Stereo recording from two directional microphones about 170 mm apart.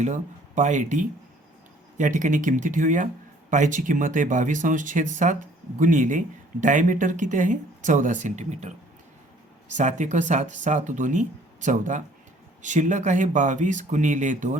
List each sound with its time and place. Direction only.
0.0 s speech: 45° right (ahead or behind)
9.7 s speech: 45° right (ahead or behind)